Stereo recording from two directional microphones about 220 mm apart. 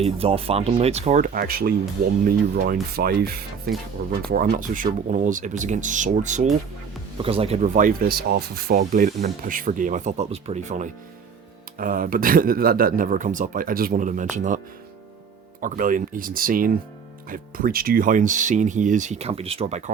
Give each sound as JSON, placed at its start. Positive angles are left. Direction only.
{"t": 0.0, "sound": "speech", "side_deg": -25}
{"t": 2.9, "sound": "speech", "side_deg": -45}
{"t": 15.6, "sound": "speech", "side_deg": -35}